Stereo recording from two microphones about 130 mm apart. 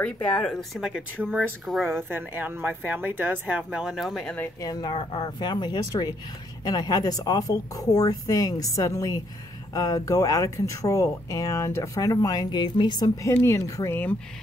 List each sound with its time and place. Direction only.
0.0 s speech: 10° left (ahead or behind)
2.0 s speech: 15° right (ahead or behind); by 4.4 s centre (ahead or behind)
4.6 s speech: 30° left (ahead or behind)